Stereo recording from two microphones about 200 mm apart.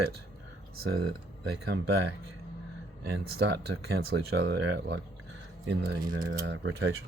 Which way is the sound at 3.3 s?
55° right (ahead or behind).